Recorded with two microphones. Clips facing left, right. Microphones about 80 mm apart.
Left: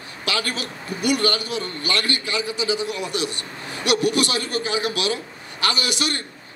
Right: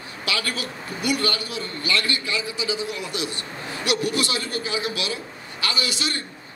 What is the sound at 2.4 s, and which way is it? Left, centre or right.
A man's voice, right.